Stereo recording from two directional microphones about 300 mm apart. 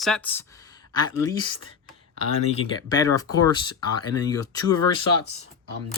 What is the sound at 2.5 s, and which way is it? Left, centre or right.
Speech, centre.